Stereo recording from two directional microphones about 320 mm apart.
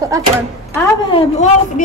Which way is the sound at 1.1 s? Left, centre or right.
Centre.